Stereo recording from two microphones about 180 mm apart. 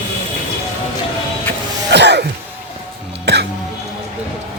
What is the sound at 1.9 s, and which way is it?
Throat clearing, 70° right (ahead or behind).